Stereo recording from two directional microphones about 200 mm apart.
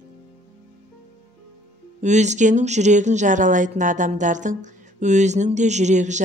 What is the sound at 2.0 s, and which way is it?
Speech, 35° right (ahead or behind).